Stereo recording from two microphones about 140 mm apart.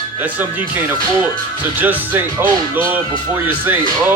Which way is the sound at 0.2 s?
10° right (ahead or behind).